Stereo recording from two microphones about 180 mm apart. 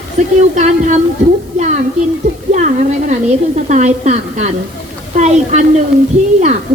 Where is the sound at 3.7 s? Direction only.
40° right (ahead or behind).